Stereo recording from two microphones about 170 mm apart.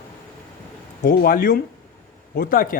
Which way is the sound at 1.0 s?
60° left (ahead or behind).